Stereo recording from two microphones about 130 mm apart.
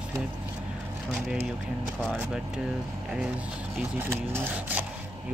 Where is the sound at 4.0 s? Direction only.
20° right (ahead or behind).